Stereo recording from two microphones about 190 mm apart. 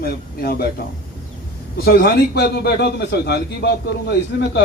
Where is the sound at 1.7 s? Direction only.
55° left (ahead or behind).